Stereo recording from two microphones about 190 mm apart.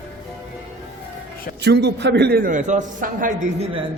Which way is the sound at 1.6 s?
65° right (ahead or behind).